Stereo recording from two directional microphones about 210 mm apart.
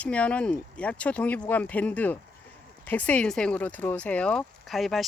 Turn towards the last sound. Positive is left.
turn(degrees=0)  # may be behind; listen again after turning